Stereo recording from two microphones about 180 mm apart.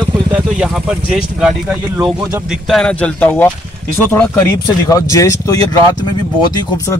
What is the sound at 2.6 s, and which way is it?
Speech, 5° left (ahead or behind).